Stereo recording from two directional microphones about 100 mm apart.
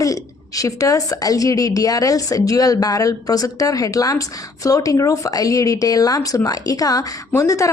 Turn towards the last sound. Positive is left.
turn(degrees=30)  # may be behind; listen again after turning